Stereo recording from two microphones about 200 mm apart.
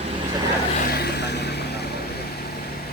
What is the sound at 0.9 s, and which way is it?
Vehicle, 55° left (ahead or behind).